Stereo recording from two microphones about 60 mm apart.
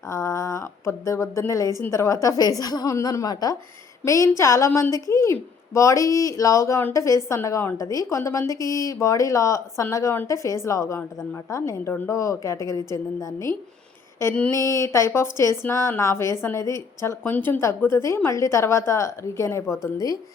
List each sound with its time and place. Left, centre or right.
0.1 s a woman's voice: left
2.2 s a woman's voice: left
4.0 s speech: left
7.8 s speech: left
11.9 s speech: left
12.1 s speech: left
14.2 s a woman's voice: left
16.6 s speech: left
17.2 s speech: left
17.7 s a woman's voice: left